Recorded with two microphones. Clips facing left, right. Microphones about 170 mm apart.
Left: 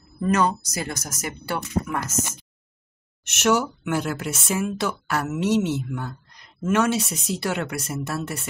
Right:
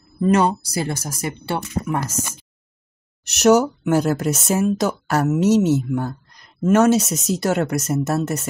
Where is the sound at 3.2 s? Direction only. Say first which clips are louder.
Right 7 dB; 40° right (ahead or behind).